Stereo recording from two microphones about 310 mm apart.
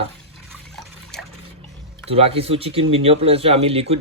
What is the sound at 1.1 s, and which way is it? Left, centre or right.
Water, centre.